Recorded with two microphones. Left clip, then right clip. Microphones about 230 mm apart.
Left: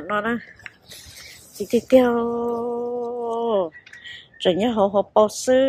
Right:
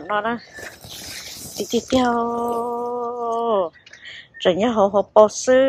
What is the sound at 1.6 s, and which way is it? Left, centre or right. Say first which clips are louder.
A woman's voice: left 3 dB; centre.